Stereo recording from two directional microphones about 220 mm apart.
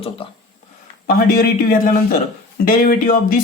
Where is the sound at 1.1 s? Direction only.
40° left (ahead or behind).